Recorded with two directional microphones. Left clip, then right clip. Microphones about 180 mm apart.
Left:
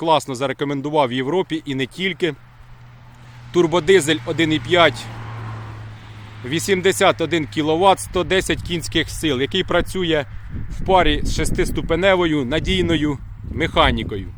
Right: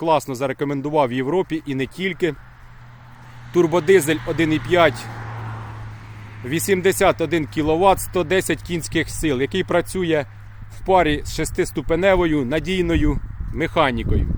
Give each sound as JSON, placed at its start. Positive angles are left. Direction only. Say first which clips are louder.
{"t": 0.0, "sound": "speech", "louder": "left 1 dB", "side_deg": 0}
{"t": 3.5, "sound": "speech", "louder": "left 1 dB", "side_deg": 0}
{"t": 5.0, "sound": "vehicle", "louder": "right 1 dB", "side_deg": 65}
{"t": 6.4, "sound": "speech", "louder": "left 1 dB", "side_deg": -5}